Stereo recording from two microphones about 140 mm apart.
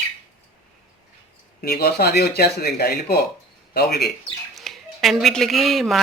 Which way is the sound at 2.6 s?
90° left.